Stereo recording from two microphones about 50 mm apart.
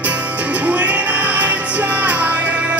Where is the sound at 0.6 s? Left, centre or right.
Right.